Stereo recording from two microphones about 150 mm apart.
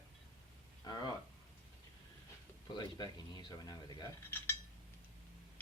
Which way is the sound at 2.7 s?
30° left (ahead or behind).